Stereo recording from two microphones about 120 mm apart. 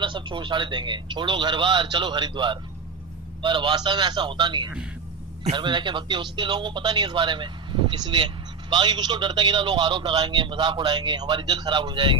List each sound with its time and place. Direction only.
0.0 s a man's voice: 40° right (ahead or behind)